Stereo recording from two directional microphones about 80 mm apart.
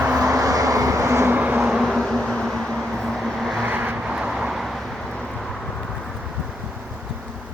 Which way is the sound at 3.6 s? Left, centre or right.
Right.